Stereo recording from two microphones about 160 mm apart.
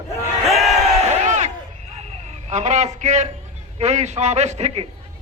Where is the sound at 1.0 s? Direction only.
45° right (ahead or behind).